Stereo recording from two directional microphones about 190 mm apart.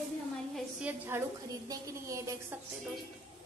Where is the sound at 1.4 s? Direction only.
20° right (ahead or behind).